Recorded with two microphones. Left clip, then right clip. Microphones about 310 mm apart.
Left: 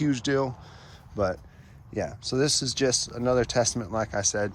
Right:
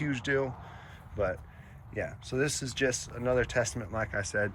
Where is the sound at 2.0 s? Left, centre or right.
Centre.